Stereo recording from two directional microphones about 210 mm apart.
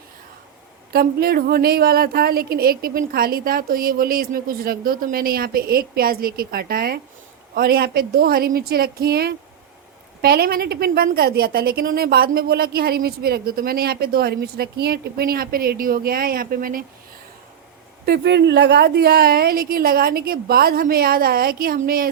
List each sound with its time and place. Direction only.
0.9 s a woman's voice: 45° right (ahead or behind)
18.0 s a woman's voice: 50° right (ahead or behind)